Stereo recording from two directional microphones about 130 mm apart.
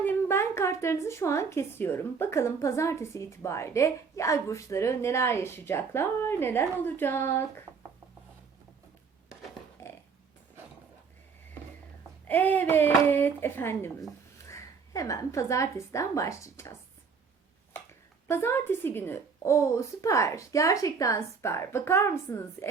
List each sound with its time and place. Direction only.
0.0 s speech: 15° left (ahead or behind)
9.8 s a sound: 20° left (ahead or behind)
12.3 s a woman's voice: 15° left (ahead or behind)
18.3 s speech: 20° left (ahead or behind)